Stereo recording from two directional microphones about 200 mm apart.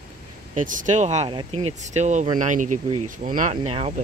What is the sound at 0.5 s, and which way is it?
Speech, 40° right (ahead or behind).